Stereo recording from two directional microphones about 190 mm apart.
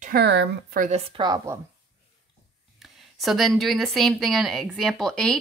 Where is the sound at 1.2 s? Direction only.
20° right (ahead or behind).